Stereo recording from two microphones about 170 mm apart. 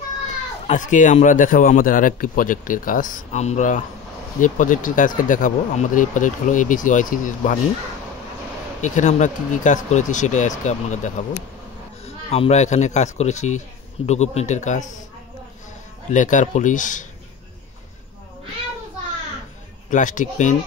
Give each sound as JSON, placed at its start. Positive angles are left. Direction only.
{"t": 0.7, "sound": "speech", "side_deg": 45}
{"t": 8.8, "sound": "speech", "side_deg": 45}
{"t": 16.1, "sound": "speech", "side_deg": 50}
{"t": 19.9, "sound": "speech", "side_deg": 50}